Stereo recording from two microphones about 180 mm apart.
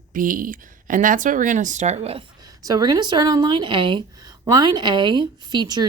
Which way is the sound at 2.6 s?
20° right (ahead or behind).